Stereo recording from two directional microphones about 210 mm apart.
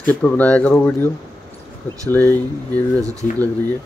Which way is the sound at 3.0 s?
15° right (ahead or behind).